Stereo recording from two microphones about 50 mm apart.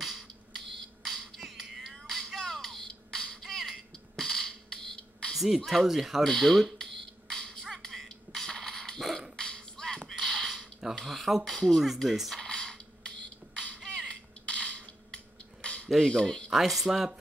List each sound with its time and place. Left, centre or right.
1.0 s music: centre
5.3 s a sound: centre
5.7 s speech: centre
6.2 s a sound: centre
7.8 s throat clearing: centre
8.4 s dog: centre
9.4 s beatboxing: centre
10.1 s creak: centre
11.1 s speech: centre
12.4 s a sound: centre
15.9 s speech: centre
16.4 s speech: centre